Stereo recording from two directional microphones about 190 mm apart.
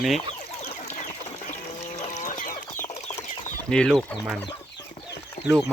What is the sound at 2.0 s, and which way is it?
Chicken, 40° left (ahead or behind).